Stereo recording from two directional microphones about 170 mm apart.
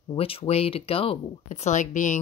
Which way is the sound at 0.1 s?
35° left (ahead or behind).